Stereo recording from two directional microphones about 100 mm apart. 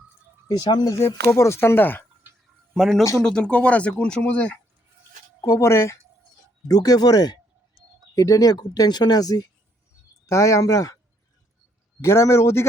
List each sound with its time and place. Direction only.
0.4 s speech: 45° left (ahead or behind)
0.9 s speech: 25° left (ahead or behind)
2.7 s speech: centre (ahead or behind)
5.4 s speech: 30° left (ahead or behind)
6.7 s speech: 40° left (ahead or behind)
12.0 s speech: 25° left (ahead or behind)